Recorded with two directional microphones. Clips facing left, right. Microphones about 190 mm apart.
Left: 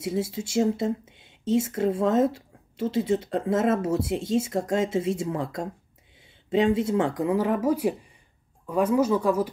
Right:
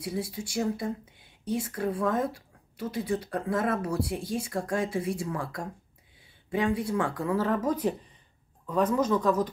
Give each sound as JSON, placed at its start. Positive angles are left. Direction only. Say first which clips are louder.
{"t": 0.0, "sound": "speech", "louder": "left 5 dB", "side_deg": 25}